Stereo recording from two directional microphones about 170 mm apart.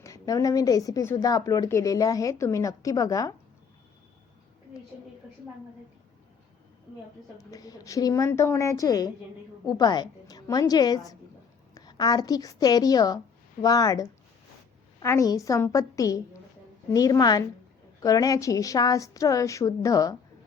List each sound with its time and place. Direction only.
0.0 s a woman's voice: 20° left (ahead or behind)
7.3 s a woman's voice: 20° left (ahead or behind)